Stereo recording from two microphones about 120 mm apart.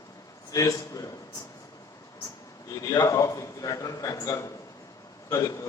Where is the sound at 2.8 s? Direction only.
30° left (ahead or behind).